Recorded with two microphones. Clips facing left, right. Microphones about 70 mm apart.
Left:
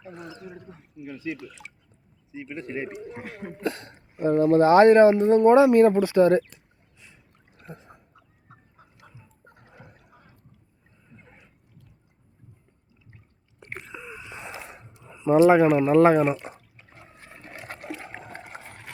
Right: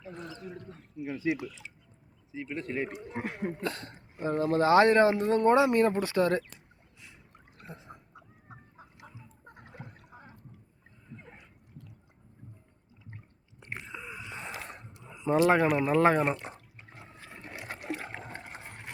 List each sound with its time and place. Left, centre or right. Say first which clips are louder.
0.0 s speech: left 2 dB; centre
1.0 s speech: right 3 dB; right
2.3 s speech: left 1 dB; centre
4.3 s speech: left 7 dB; left
7.9 s dog: right 2 dB; right
13.9 s gasp: left 2 dB; centre
15.0 s a sound: left 7 dB; centre
15.4 s speech: left 7 dB; centre
15.6 s speech: left 7 dB; centre
16.7 s water: even; centre